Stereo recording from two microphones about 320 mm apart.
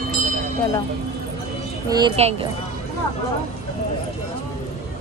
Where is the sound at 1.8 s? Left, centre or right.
Centre.